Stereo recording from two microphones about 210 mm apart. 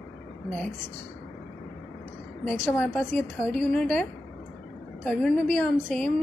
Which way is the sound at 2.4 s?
10° left (ahead or behind).